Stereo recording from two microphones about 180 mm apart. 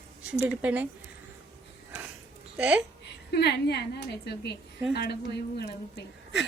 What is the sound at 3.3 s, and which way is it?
A woman's voice, 65° left (ahead or behind).